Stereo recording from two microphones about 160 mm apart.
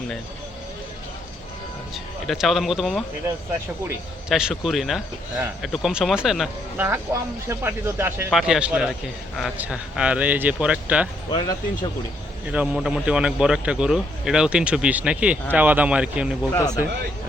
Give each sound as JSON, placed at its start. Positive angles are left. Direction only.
{"t": 2.2, "sound": "a man's voice", "side_deg": 0}
{"t": 4.3, "sound": "a man's voice", "side_deg": -5}
{"t": 6.7, "sound": "speech", "side_deg": -15}
{"t": 8.3, "sound": "a man's voice", "side_deg": -5}
{"t": 11.3, "sound": "speech", "side_deg": 30}
{"t": 12.5, "sound": "a man's voice", "side_deg": -5}